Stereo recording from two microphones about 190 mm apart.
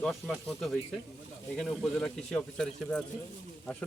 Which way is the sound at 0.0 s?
Centre (ahead or behind).